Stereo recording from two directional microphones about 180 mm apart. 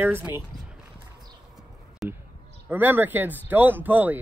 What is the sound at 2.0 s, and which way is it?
Clip-clop, centre (ahead or behind).